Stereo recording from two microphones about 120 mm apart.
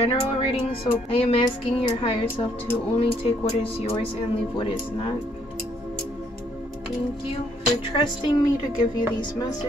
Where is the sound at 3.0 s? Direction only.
50° left (ahead or behind).